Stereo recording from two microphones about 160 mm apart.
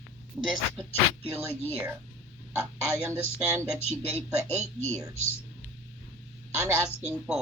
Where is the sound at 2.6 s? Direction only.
15° right (ahead or behind).